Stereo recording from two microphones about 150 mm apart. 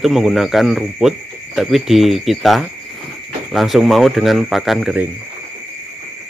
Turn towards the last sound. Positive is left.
turn(degrees=0)  # may be behind; listen again after turning